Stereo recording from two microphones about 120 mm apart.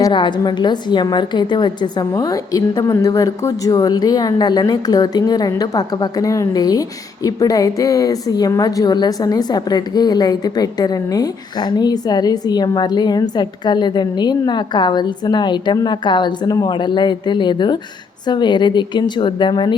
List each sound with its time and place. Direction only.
0.1 s a woman's voice: 40° left (ahead or behind)